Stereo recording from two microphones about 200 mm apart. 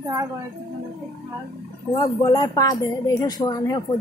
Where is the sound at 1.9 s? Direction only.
20° left (ahead or behind).